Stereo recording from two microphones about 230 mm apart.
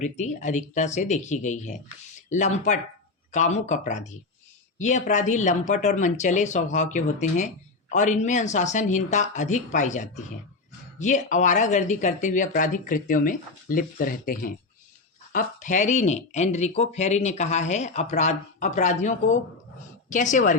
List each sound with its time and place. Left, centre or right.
0.0 s speech: left